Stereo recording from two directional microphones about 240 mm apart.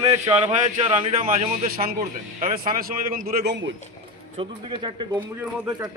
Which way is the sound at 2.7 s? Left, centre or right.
Right.